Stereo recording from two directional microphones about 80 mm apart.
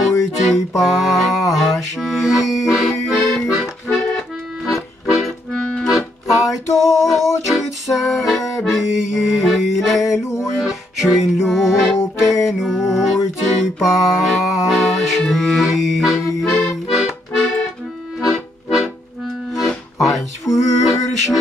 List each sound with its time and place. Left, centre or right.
0.4 s a sound: centre
1.5 s music: centre
3.4 s accordion: centre
6.5 s a sound: left
7.2 s music: left
7.5 s music: centre
10.0 s mantra: left
10.6 s music: centre
18.2 s accordion: centre
20.0 s a sound: centre